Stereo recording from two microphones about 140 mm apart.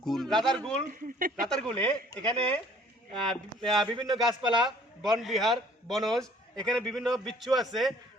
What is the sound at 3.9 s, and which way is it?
Speech, 30° right (ahead or behind).